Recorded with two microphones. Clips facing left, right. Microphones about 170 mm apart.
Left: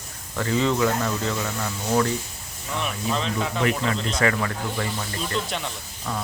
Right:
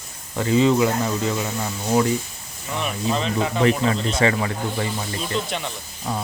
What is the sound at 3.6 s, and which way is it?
Speech, 30° right (ahead or behind).